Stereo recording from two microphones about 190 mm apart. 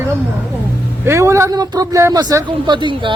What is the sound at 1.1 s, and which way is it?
Speech, 15° right (ahead or behind).